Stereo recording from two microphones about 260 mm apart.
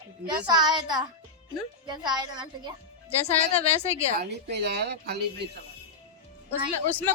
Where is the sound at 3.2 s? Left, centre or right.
Left.